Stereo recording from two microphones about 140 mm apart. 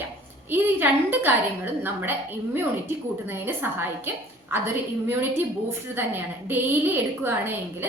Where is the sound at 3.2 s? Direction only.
15° right (ahead or behind).